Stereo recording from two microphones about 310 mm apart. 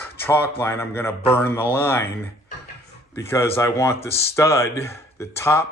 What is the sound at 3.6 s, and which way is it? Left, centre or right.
Speech, centre.